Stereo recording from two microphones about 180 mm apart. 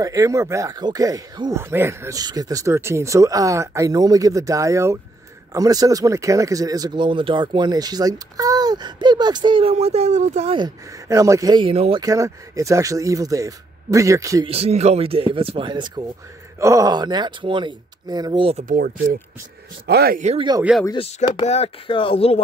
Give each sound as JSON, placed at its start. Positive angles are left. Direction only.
{"t": 0.0, "sound": "speech", "side_deg": -20}
{"t": 10.6, "sound": "speech", "side_deg": -20}
{"t": 12.0, "sound": "speech", "side_deg": -20}
{"t": 14.5, "sound": "speech", "side_deg": -35}
{"t": 19.9, "sound": "speech", "side_deg": -60}
{"t": 20.3, "sound": "speech", "side_deg": -25}
{"t": 21.5, "sound": "speech", "side_deg": 30}